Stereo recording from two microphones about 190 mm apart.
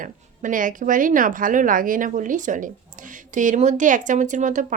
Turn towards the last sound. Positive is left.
turn(degrees=-40)  # may be behind; listen again after turning